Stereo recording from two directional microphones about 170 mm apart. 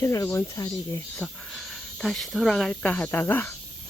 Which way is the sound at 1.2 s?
5° left (ahead or behind).